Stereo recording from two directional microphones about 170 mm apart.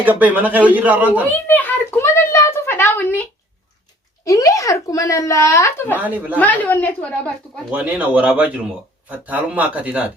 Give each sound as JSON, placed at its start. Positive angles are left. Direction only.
{"t": 0.0, "sound": "speech", "side_deg": -10}
{"t": 1.5, "sound": "a child's voice", "side_deg": 10}
{"t": 4.3, "sound": "speech", "side_deg": 20}
{"t": 6.0, "sound": "speech", "side_deg": -10}
{"t": 6.4, "sound": "a child's voice", "side_deg": 10}
{"t": 7.7, "sound": "speech", "side_deg": -10}